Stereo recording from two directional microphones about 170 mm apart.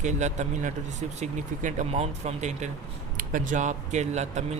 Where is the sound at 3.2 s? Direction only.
50° right (ahead or behind).